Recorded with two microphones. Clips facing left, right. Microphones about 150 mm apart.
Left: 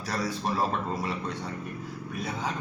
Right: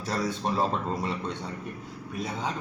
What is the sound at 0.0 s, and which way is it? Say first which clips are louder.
Speech: right 1 dB; 25° right (ahead or behind).